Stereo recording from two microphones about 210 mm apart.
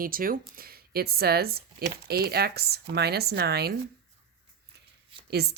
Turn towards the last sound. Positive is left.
turn(degrees=-50)  # may be behind; listen again after turning